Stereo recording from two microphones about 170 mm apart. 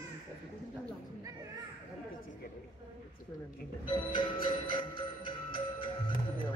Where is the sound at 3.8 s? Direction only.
30° left (ahead or behind).